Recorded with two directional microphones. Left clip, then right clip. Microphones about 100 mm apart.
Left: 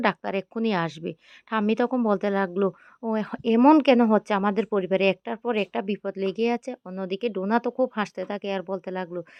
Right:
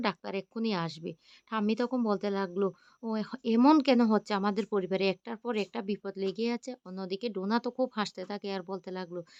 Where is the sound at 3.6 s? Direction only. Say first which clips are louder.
Left 6 dB; 20° left (ahead or behind).